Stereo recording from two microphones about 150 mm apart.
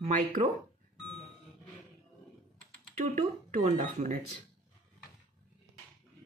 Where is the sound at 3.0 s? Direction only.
55° right (ahead or behind).